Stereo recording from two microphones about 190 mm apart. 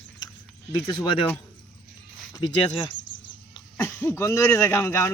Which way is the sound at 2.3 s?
25° left (ahead or behind).